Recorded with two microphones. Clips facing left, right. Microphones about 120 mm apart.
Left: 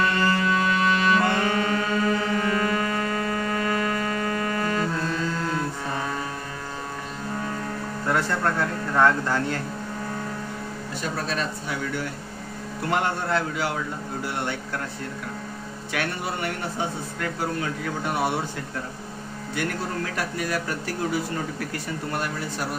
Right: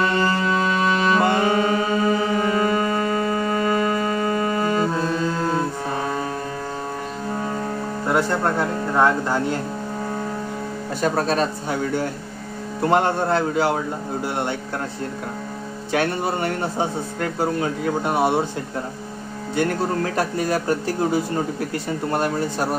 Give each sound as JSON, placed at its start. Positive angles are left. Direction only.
{"t": 0.0, "sound": "music", "side_deg": -20}
{"t": 8.1, "sound": "speech", "side_deg": -20}
{"t": 11.0, "sound": "speech", "side_deg": -45}
{"t": 15.9, "sound": "speech", "side_deg": -30}
{"t": 19.5, "sound": "speech", "side_deg": -30}